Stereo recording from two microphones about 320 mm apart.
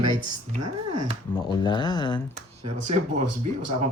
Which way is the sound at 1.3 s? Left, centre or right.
Centre.